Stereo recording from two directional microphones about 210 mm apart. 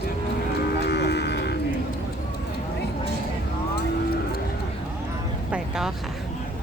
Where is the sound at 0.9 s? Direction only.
50° left (ahead or behind).